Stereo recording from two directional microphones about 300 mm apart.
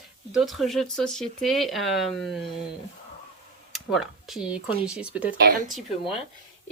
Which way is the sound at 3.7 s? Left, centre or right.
Centre.